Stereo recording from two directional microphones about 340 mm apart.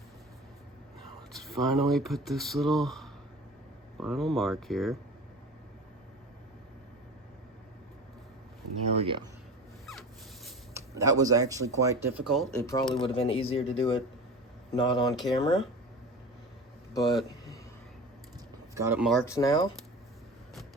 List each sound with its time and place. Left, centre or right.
0.9 s speech: centre
9.0 s speech: centre
10.4 s speech: centre
13.0 s speech: centre
16.9 s speech: centre
18.7 s speech: centre